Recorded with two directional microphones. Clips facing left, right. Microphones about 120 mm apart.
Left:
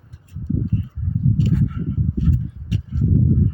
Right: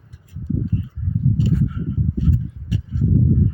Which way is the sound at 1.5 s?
60° left (ahead or behind).